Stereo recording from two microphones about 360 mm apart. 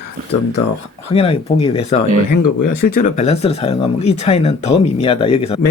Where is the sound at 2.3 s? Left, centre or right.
Left.